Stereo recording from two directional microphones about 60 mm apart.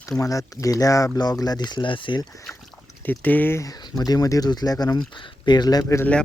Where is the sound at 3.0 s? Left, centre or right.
Left.